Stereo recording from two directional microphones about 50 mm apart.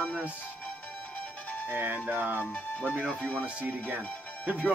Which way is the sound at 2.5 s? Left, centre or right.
Left.